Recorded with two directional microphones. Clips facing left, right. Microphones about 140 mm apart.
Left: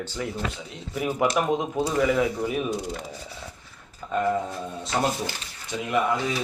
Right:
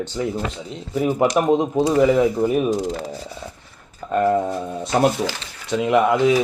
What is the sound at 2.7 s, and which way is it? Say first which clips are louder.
Speech: right 7 dB; 90° right.